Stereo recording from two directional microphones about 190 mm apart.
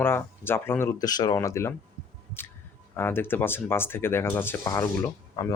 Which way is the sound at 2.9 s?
10° left (ahead or behind).